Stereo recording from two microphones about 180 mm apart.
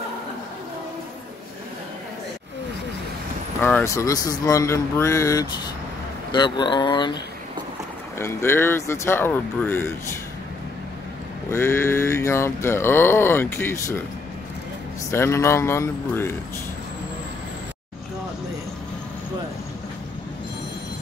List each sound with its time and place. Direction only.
3.6 s speech: 15° left (ahead or behind)
8.2 s speech: 15° left (ahead or behind)
11.5 s speech: 15° left (ahead or behind)
15.0 s speech: 15° left (ahead or behind)